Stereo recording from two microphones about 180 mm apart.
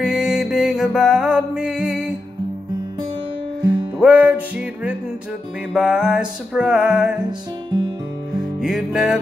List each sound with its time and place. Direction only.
0.0 s music: 5° right (ahead or behind)
3.6 s music: 5° right (ahead or behind)
8.4 s music: centre (ahead or behind)